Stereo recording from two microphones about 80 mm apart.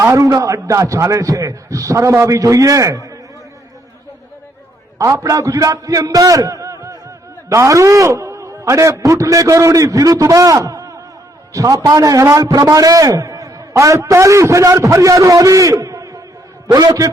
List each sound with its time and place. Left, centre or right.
0.0 s a man's voice: right
4.9 s a man's voice: right
16.6 s a man's voice: right